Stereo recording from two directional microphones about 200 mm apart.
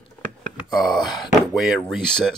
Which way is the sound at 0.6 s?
Centre (ahead or behind).